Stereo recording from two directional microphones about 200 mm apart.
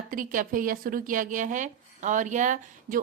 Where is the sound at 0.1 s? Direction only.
45° right (ahead or behind).